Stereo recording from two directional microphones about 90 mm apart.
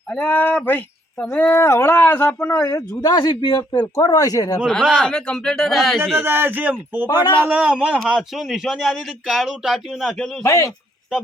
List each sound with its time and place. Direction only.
0.1 s speech: 15° left (ahead or behind)
2.6 s speech: 40° left (ahead or behind)
3.9 s speech: 40° left (ahead or behind)
4.6 s speech: centre (ahead or behind)
6.1 s a man's voice: 25° right (ahead or behind)
7.9 s speech: centre (ahead or behind)
10.4 s speech: 35° left (ahead or behind)